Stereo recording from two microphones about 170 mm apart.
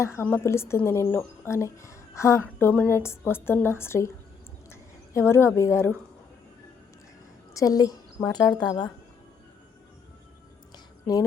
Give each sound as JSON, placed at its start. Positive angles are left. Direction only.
{"t": 0.2, "sound": "a woman's voice", "side_deg": 15}
{"t": 7.5, "sound": "a woman's voice", "side_deg": 20}
{"t": 11.0, "sound": "speech", "side_deg": 20}